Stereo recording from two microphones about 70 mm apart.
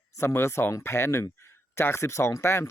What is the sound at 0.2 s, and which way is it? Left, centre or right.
Speech, left.